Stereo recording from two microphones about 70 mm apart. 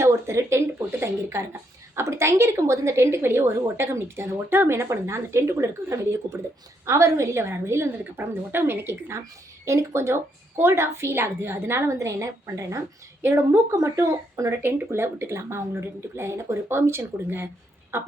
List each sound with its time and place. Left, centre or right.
0.0 s a woman's voice: right
14.6 s a woman's voice: right